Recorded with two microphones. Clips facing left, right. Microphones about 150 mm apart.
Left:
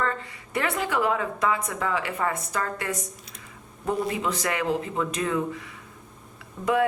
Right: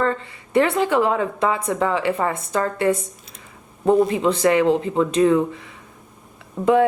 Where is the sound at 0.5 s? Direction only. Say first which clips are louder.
Right 9 dB; 30° right (ahead or behind).